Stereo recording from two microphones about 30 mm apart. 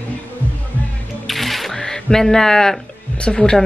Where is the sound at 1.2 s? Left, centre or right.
Centre.